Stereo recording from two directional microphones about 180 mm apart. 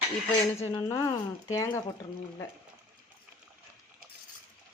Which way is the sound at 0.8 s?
20° left (ahead or behind).